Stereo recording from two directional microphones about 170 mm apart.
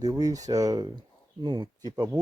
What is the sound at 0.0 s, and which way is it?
Speech, 20° right (ahead or behind).